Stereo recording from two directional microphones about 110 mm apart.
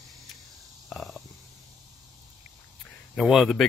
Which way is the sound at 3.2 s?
Centre (ahead or behind).